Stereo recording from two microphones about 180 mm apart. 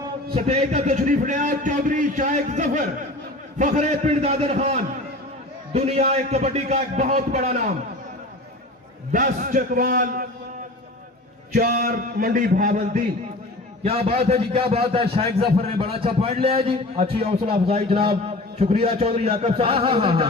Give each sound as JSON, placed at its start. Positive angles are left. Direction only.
{"t": 0.3, "sound": "a man's voice", "side_deg": -35}
{"t": 9.1, "sound": "a man's voice", "side_deg": -50}
{"t": 11.5, "sound": "a man's voice", "side_deg": -50}
{"t": 13.8, "sound": "a man's voice", "side_deg": -35}